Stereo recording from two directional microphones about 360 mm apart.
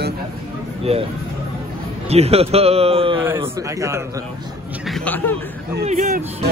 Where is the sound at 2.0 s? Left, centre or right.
Centre.